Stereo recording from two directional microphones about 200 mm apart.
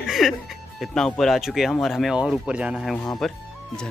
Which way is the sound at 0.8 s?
Centre (ahead or behind).